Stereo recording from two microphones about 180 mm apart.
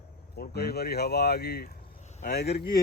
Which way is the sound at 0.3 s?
60° left (ahead or behind).